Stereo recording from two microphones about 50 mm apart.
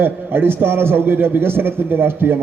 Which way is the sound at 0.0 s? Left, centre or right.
Right.